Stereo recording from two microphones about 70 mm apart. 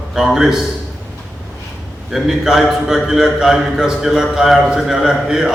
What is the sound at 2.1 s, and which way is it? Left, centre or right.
A man's voice, centre.